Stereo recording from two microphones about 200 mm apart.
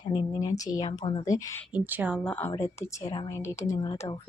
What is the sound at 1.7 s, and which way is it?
Speech, 10° right (ahead or behind).